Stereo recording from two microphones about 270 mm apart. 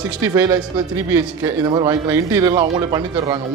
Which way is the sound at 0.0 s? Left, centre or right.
Centre.